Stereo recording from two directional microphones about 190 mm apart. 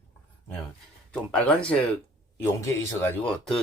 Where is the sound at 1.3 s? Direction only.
5° left (ahead or behind).